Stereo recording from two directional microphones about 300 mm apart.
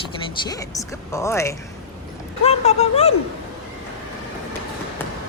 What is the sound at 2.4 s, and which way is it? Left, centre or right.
Speech, left.